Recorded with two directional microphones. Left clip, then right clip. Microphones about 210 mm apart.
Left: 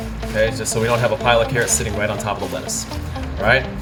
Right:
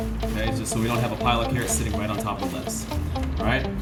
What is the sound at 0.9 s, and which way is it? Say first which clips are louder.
Speech: left 8 dB; 45° left (ahead or behind).